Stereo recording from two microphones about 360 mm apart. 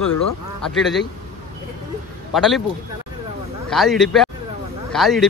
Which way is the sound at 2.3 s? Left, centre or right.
Centre.